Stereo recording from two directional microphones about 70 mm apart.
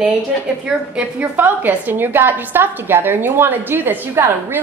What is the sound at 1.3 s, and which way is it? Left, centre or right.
A woman's voice, right.